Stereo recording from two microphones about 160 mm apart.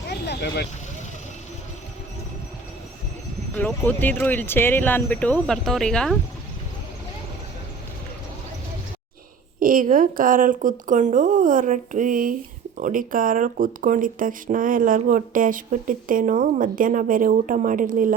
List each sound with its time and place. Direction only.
0.3 s speech: 90° left
3.6 s speech: 10° left (ahead or behind)
9.6 s a woman's voice: 60° right (ahead or behind)